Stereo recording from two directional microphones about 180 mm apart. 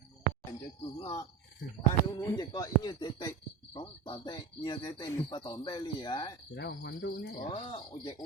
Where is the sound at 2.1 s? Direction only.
20° left (ahead or behind).